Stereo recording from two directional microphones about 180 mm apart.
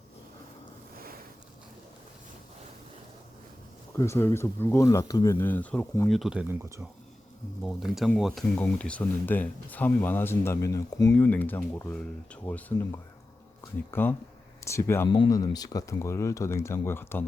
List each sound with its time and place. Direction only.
3.9 s speech: 15° left (ahead or behind); by 6.6 s 5° right (ahead or behind)
7.6 s speech: centre (ahead or behind)